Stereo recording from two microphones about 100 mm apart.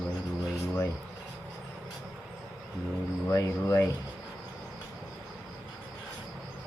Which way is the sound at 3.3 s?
30° left (ahead or behind).